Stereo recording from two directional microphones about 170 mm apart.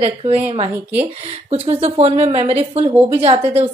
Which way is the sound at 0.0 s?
35° right (ahead or behind).